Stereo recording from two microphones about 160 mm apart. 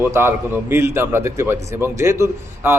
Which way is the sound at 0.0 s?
15° right (ahead or behind).